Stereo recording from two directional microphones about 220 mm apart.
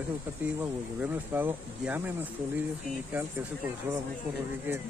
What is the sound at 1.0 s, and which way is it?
Speech, 10° right (ahead or behind).